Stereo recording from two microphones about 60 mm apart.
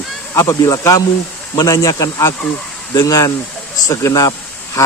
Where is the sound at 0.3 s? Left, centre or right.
Left.